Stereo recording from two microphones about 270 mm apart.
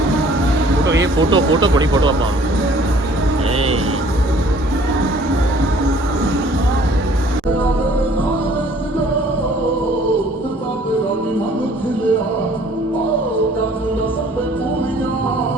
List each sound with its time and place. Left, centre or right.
1.0 s speech: centre